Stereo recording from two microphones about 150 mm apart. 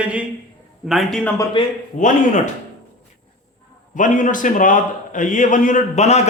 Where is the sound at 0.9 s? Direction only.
Centre (ahead or behind).